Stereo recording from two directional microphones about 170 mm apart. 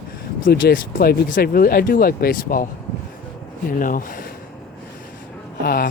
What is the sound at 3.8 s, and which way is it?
Speech, 55° left (ahead or behind).